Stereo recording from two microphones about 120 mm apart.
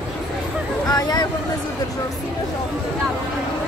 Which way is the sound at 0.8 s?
30° left (ahead or behind).